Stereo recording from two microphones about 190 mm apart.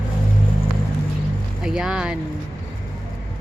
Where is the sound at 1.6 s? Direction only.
5° right (ahead or behind).